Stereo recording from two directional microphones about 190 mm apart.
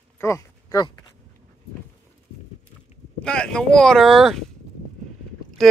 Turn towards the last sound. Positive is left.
turn(degrees=0)  # may be behind; listen again after turning